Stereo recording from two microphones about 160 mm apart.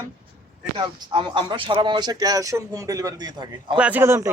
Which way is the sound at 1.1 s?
30° right (ahead or behind).